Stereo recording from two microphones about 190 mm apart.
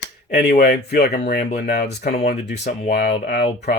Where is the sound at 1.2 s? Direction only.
40° left (ahead or behind).